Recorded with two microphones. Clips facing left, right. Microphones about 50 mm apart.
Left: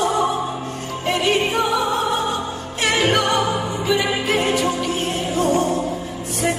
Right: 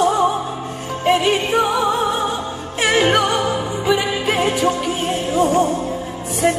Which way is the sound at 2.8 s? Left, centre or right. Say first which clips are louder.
Right 3 dB; centre.